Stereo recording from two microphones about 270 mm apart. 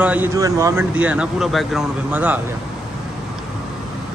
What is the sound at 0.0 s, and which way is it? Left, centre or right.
Speech, centre.